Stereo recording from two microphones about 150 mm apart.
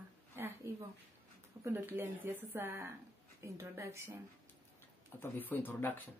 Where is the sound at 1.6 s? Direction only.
15° right (ahead or behind).